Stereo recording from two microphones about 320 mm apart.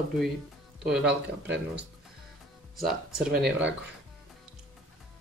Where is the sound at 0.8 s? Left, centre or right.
Centre.